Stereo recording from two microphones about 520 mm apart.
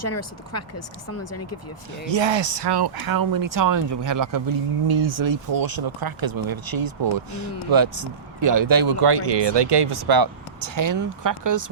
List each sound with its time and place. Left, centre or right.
0.0 s speech: left
2.0 s speech: right